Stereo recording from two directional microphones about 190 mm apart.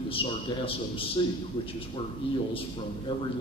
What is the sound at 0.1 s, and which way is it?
A man's voice, 30° left (ahead or behind).